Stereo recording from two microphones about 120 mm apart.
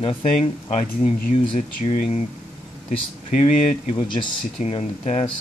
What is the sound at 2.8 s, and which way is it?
Speech, 85° left.